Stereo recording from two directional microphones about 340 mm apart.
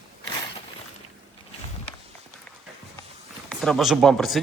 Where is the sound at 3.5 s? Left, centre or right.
Centre.